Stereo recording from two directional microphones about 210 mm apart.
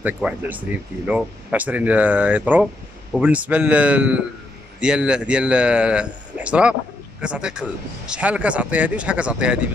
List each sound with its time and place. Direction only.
0.0 s speech: 10° right (ahead or behind)